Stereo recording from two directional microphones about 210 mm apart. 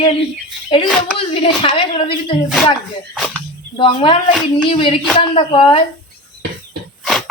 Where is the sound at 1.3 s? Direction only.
25° left (ahead or behind).